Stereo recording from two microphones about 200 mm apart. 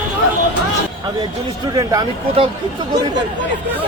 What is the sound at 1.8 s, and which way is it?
Speech, 20° right (ahead or behind).